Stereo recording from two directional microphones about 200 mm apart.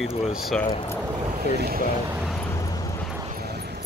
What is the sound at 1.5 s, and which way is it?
Speech, 50° right (ahead or behind).